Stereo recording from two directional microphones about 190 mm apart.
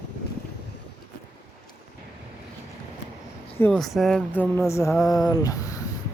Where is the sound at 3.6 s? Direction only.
5° left (ahead or behind).